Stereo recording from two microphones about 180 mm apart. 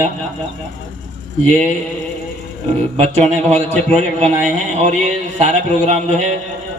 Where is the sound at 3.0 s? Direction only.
40° right (ahead or behind).